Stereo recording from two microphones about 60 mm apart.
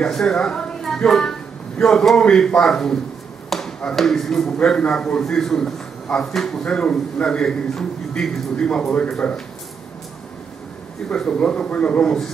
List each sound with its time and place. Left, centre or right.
0.0 s a man's voice: centre
11.1 s a man's voice: centre